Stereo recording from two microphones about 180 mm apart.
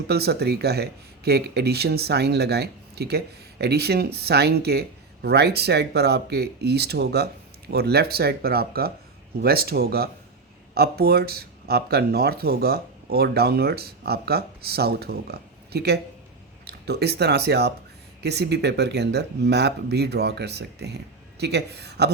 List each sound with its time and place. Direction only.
0.1 s speech: 65° right (ahead or behind)